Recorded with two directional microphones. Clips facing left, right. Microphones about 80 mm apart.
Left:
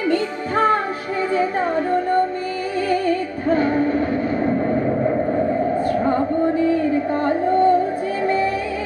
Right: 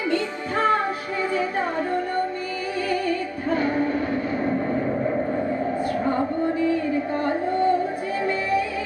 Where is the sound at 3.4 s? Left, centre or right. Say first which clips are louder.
Left 5 dB; left.